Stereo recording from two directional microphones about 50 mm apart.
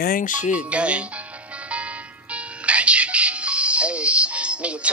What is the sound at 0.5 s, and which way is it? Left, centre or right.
Speech, right.